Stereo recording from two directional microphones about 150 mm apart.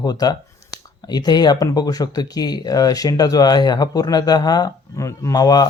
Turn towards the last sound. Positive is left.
turn(degrees=25)  # may be behind; listen again after turning